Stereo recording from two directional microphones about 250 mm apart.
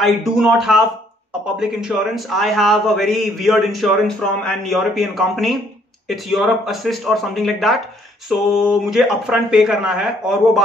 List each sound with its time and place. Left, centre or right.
0.0 s a man's voice: centre